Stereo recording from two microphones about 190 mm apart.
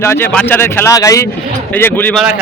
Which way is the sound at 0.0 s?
10° left (ahead or behind).